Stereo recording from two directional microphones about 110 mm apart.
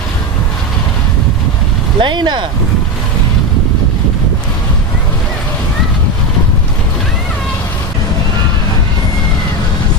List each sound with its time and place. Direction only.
2.0 s speech: 45° right (ahead or behind)